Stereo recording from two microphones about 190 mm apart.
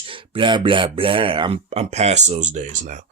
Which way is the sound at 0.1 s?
25° right (ahead or behind).